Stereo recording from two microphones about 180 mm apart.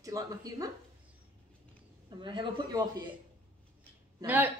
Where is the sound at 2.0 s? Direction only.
25° right (ahead or behind).